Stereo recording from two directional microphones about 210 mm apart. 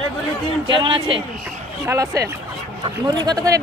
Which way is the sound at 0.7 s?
20° right (ahead or behind).